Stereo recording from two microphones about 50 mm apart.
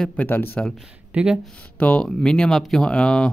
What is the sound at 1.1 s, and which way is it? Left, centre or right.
Speech, right.